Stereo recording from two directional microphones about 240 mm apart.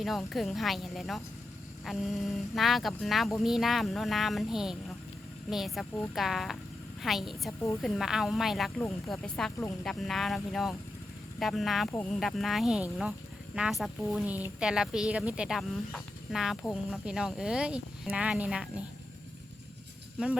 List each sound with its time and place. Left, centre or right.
0.0 s speech: centre
20.1 s speech: centre